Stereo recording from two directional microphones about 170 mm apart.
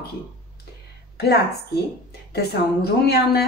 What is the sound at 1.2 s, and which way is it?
A woman's voice, 70° left (ahead or behind).